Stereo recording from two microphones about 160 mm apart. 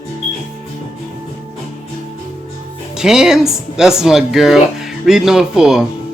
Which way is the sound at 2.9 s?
5° right (ahead or behind).